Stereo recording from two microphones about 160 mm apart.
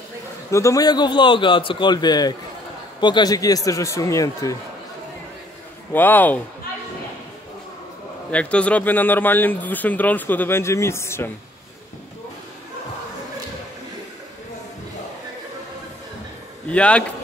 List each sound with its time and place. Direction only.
0.5 s a man's voice: 20° left (ahead or behind)
5.9 s speech: 10° left (ahead or behind)
8.3 s speech: 5° left (ahead or behind)
16.6 s speech: 5° left (ahead or behind)